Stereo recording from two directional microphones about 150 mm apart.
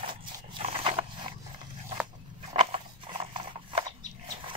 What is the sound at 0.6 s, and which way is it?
Dog, 40° right (ahead or behind).